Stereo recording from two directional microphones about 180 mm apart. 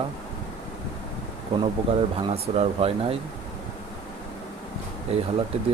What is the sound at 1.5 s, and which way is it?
Speech, 35° right (ahead or behind).